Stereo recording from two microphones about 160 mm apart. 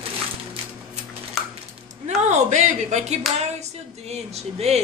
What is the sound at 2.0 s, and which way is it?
Speech, 45° right (ahead or behind).